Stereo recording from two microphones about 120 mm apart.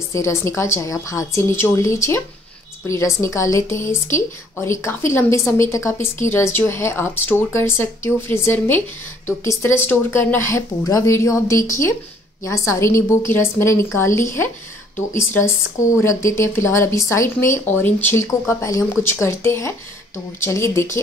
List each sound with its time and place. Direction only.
0.1 s speech: 25° left (ahead or behind)
16.0 s speech: 25° left (ahead or behind)